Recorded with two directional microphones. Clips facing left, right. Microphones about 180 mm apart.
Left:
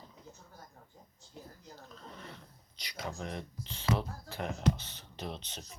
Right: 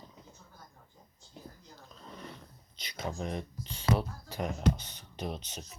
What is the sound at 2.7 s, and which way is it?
Speech, 20° right (ahead or behind).